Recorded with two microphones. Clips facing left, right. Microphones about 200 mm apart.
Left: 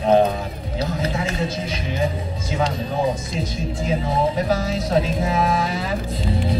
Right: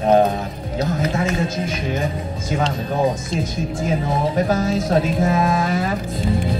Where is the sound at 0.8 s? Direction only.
30° left (ahead or behind).